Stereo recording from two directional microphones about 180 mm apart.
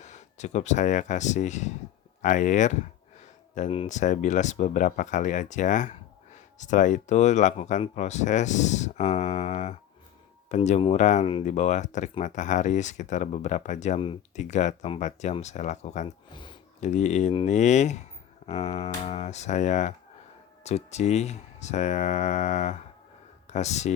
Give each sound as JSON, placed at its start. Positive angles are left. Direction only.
{"t": 0.0, "sound": "speech", "side_deg": 40}
{"t": 16.3, "sound": "a sound", "side_deg": 25}
{"t": 16.8, "sound": "speech", "side_deg": 40}